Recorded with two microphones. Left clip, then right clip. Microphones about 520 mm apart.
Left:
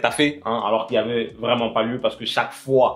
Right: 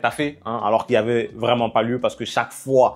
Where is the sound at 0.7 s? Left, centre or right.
Right.